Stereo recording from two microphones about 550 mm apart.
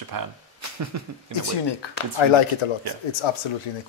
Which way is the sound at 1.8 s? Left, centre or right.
Left.